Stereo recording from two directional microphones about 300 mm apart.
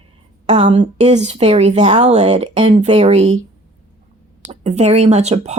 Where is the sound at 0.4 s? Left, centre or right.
Right.